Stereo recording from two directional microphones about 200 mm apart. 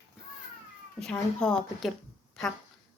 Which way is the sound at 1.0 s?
5° left (ahead or behind).